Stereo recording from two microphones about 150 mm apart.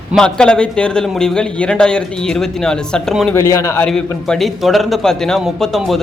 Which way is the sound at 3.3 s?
20° left (ahead or behind).